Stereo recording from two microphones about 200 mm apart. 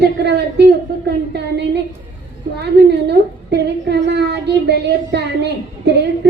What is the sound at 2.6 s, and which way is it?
A woman's voice, 55° right (ahead or behind).